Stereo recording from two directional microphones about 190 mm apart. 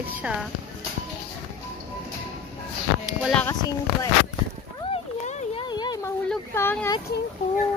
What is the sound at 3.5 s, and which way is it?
Speech, 20° left (ahead or behind).